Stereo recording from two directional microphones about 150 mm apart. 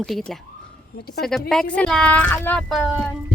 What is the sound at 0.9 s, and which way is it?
Speech, 90° left.